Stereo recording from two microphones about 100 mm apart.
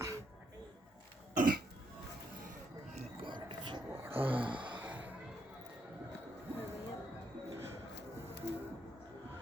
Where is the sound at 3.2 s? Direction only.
50° right (ahead or behind).